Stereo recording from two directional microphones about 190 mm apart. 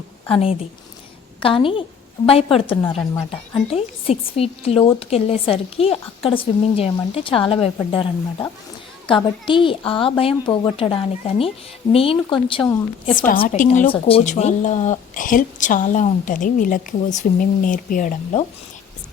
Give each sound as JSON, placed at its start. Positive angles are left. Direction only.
{"t": 0.3, "sound": "a woman's voice", "side_deg": 30}
{"t": 13.1, "sound": "a woman's voice", "side_deg": 45}